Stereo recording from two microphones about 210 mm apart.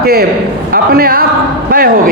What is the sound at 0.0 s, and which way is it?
A man's voice, 45° right (ahead or behind).